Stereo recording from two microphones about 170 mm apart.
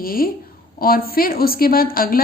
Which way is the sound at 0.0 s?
60° left (ahead or behind).